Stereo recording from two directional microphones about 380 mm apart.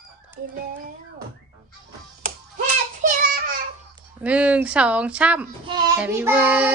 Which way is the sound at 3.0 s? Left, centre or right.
Right.